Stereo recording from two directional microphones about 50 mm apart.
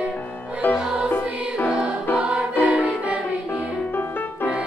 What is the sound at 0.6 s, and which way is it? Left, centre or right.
Music, left.